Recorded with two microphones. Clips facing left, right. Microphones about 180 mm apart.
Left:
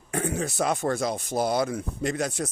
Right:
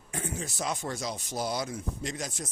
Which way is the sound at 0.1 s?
65° left (ahead or behind).